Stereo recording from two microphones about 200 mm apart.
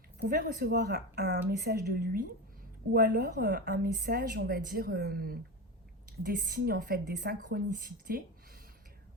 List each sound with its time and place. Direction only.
0.2 s speech: 45° right (ahead or behind)